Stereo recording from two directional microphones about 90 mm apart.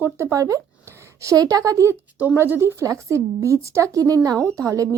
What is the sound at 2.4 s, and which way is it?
Speech, 25° right (ahead or behind).